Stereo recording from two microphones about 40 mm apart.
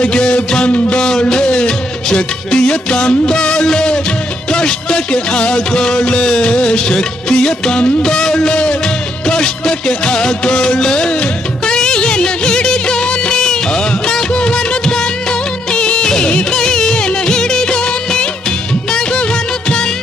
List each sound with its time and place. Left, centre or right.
0.0 s music: left
15.7 s music of bollywood: left
16.5 s music: centre
18.9 s music of bollywood: centre